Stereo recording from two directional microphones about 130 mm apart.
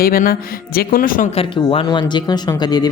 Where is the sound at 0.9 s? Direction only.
90° left.